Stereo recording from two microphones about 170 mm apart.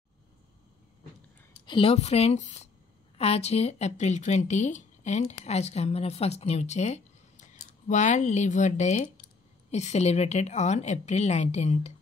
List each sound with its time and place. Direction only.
1.7 s speech: 35° left (ahead or behind)